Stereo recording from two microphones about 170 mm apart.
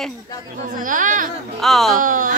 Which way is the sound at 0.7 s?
50° right (ahead or behind).